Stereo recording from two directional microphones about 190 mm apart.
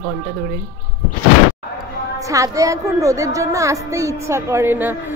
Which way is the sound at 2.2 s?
15° right (ahead or behind).